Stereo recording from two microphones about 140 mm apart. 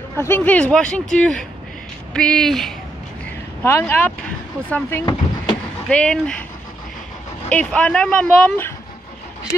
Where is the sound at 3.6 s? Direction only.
15° left (ahead or behind).